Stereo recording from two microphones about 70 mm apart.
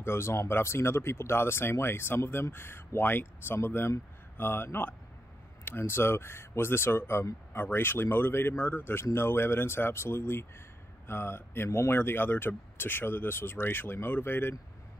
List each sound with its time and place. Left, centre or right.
0.0 s speech: left